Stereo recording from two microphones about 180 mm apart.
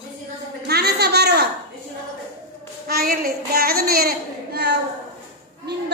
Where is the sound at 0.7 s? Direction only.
65° right (ahead or behind).